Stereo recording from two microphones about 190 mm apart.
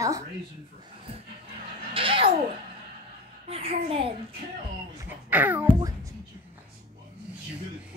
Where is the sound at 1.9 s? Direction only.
30° right (ahead or behind).